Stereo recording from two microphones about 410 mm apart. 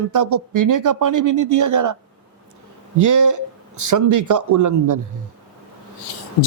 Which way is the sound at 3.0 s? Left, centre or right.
Right.